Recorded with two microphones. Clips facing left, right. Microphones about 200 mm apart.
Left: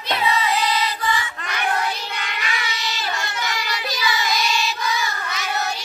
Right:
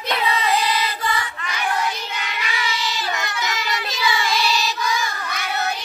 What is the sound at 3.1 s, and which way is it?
Music, 20° right (ahead or behind).